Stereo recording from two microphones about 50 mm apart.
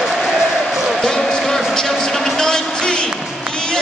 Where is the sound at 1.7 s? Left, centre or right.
Centre.